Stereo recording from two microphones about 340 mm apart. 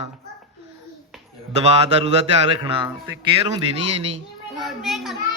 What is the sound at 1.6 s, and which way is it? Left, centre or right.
Speech, centre.